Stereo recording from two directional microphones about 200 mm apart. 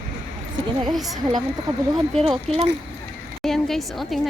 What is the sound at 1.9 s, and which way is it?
Speech, centre (ahead or behind).